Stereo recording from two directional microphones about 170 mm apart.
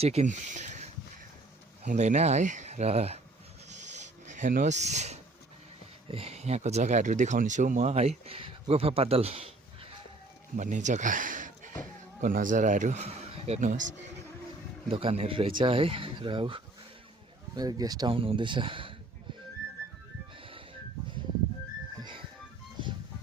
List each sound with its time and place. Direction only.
0.0 s speech: 40° right (ahead or behind)
3.7 s filing: 45° right (ahead or behind)
6.1 s speech: 35° right (ahead or behind)
10.6 s speech: 45° right (ahead or behind)
14.8 s speech: 35° right (ahead or behind)